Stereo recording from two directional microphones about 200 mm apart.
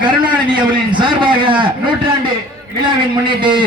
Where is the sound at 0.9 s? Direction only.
25° right (ahead or behind).